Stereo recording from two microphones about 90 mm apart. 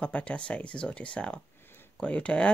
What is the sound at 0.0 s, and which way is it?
Speech, 10° left (ahead or behind).